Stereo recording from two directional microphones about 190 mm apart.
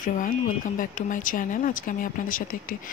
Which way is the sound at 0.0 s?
45° left (ahead or behind).